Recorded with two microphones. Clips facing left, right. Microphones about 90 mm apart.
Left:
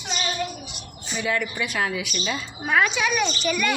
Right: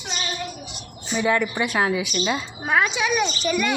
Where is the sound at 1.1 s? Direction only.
35° right (ahead or behind).